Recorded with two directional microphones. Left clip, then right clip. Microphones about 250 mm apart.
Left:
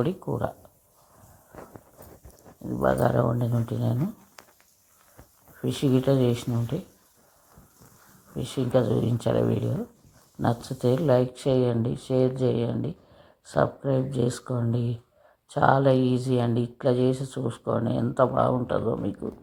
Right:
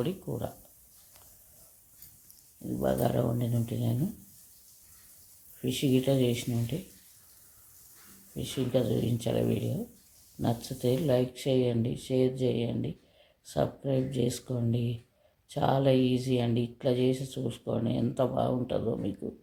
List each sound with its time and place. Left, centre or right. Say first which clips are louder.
0.0 s speech: left 6 dB; centre
2.7 s speech: left 6 dB; centre
5.6 s speech: left 4 dB; centre
8.4 s speech: left 5 dB; centre